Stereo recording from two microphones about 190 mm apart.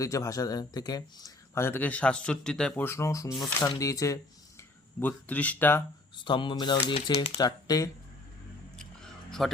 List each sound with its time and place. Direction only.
0.0 s speech: 15° left (ahead or behind)
6.2 s speech: 25° left (ahead or behind)
9.4 s speech: centre (ahead or behind)